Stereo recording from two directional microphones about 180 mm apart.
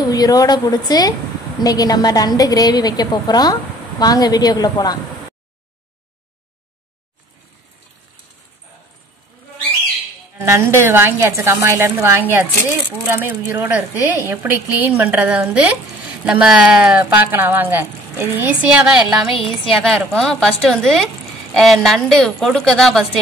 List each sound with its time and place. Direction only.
0.1 s a woman's voice: 20° left (ahead or behind)
10.4 s speech: 15° right (ahead or behind)
19.3 s a woman's voice: 30° left (ahead or behind)
19.7 s a woman's voice: centre (ahead or behind)